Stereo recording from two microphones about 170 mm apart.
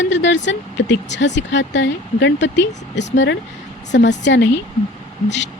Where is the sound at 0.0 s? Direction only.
90° left.